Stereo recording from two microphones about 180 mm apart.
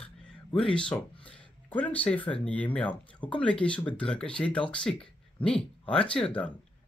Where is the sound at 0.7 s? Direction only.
5° left (ahead or behind).